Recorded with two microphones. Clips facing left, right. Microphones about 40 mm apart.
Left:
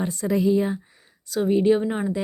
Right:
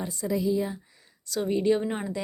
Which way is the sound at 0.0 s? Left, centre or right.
Left.